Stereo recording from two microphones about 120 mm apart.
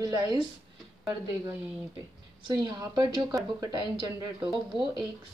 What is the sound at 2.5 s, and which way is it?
A woman's voice, 35° right (ahead or behind).